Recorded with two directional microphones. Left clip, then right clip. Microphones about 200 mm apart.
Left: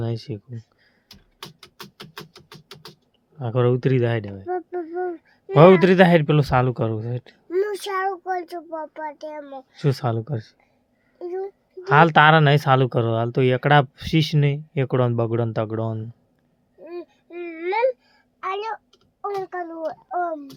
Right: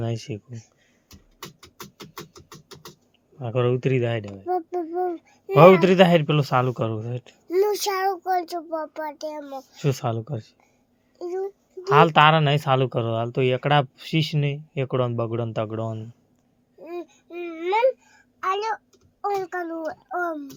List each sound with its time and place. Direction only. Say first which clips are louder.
0.0 s speech: left 1 dB; 15° left (ahead or behind)
2.0 s music: left 1 dB; 15° right (ahead or behind)
3.3 s speech: left 2 dB; 30° left (ahead or behind)
4.4 s a child's voice: right 4 dB; 5° right (ahead or behind)
5.5 s speech: even; 30° left (ahead or behind)
7.5 s a child's voice: right 2 dB; centre (ahead or behind)
9.7 s speech: left 2 dB; 25° left (ahead or behind)
11.2 s speech: even; 5° left (ahead or behind)
11.8 s speech: left 1 dB; 30° left (ahead or behind)
16.8 s a sound: right 1 dB; 10° left (ahead or behind)
18.3 s a sound: right 2 dB; 5° right (ahead or behind)
19.2 s a child's voice: right 1 dB; 5° left (ahead or behind)